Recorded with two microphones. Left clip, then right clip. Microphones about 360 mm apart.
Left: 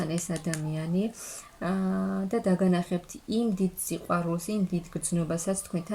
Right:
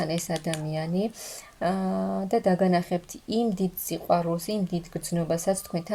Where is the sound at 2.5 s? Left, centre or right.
Centre.